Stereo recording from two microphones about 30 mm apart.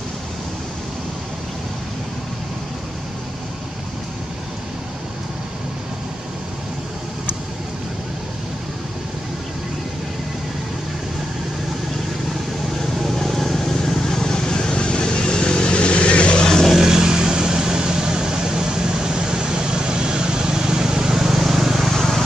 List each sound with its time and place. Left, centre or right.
13.0 s vehicle: centre; by 16.3 s left
16.3 s vehicle: left
16.9 s vehicle: right